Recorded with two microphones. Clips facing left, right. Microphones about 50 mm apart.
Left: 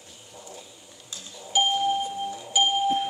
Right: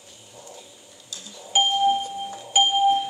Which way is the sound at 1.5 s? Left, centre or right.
Right.